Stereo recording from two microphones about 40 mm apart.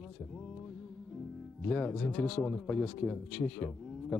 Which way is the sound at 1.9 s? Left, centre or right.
Centre.